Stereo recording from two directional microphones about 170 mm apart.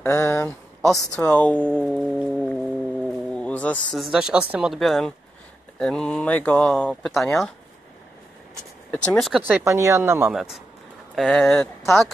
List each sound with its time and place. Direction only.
0.0 s speech: 15° left (ahead or behind)
0.8 s speech: centre (ahead or behind)
8.9 s speech: 5° left (ahead or behind)
9.4 s speech: 15° right (ahead or behind)
10.3 s speech: centre (ahead or behind)